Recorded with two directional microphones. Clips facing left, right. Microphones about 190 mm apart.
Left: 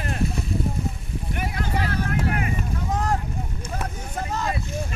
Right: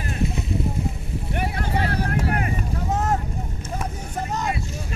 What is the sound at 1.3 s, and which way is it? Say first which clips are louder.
Vehicle: right 2 dB; 30° right (ahead or behind).